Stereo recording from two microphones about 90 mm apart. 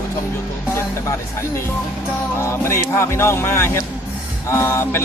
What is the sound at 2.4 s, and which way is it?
Speech, 30° left (ahead or behind).